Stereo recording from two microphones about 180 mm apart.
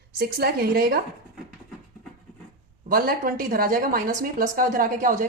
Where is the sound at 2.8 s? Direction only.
55° right (ahead or behind).